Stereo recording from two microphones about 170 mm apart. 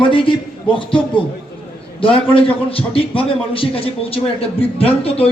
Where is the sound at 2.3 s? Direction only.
30° left (ahead or behind).